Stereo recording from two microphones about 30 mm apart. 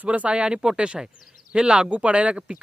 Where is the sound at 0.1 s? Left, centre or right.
Right.